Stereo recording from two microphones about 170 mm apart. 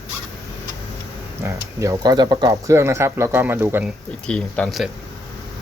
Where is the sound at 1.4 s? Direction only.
15° right (ahead or behind).